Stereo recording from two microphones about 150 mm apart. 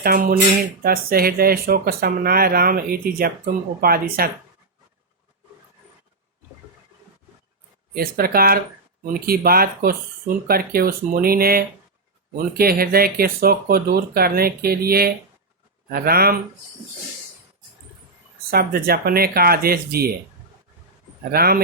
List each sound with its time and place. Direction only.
0.0 s speech: 75° right (ahead or behind)
7.9 s speech: 80° right
18.5 s speech: 90° right
21.3 s speech: 90° right